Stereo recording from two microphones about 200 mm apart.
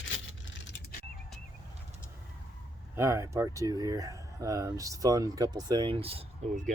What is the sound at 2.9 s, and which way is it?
Speech, 15° right (ahead or behind).